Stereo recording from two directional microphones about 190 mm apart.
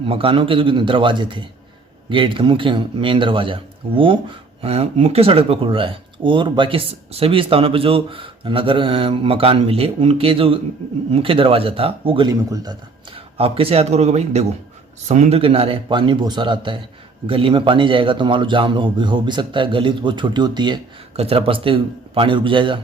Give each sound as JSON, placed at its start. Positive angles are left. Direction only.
{"t": 0.0, "sound": "a man's voice", "side_deg": -30}
{"t": 13.1, "sound": "a man's voice", "side_deg": -30}